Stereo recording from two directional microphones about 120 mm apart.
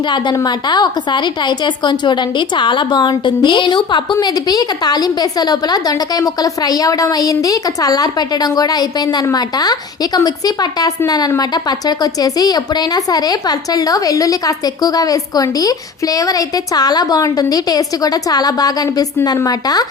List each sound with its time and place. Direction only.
0.3 s a woman's voice: 35° left (ahead or behind)